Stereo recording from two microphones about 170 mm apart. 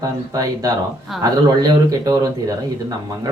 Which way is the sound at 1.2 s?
20° right (ahead or behind).